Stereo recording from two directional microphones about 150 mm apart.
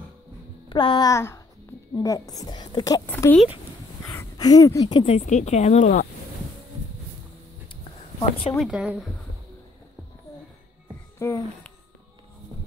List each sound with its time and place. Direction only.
0.7 s a woman's voice: 30° left (ahead or behind)
3.1 s speech: 15° left (ahead or behind); by 5.1 s 30° left (ahead or behind)
5.1 s speech: 50° left (ahead or behind)
7.6 s a sound: 35° left (ahead or behind)
8.5 s speech: 5° right (ahead or behind)
11.1 s speech: 15° left (ahead or behind)